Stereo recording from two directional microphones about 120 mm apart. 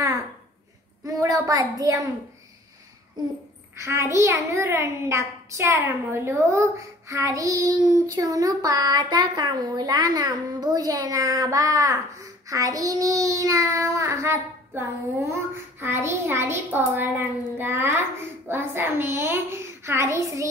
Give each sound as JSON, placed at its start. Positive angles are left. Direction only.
{"t": 1.0, "sound": "a woman's voice", "side_deg": -30}
{"t": 3.7, "sound": "a child's voice", "side_deg": -25}